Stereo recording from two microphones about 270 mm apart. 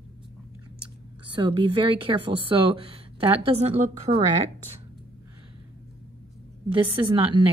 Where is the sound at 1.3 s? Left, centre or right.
Centre.